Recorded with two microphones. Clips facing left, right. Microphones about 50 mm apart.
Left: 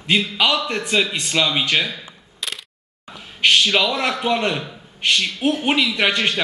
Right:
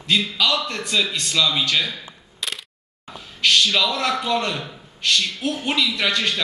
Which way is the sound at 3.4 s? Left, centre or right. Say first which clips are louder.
Left 2 dB; left.